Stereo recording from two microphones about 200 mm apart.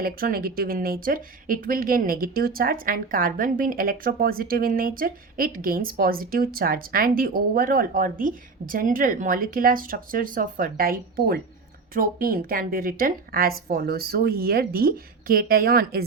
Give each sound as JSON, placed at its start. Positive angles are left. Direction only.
{"t": 0.0, "sound": "speech", "side_deg": -45}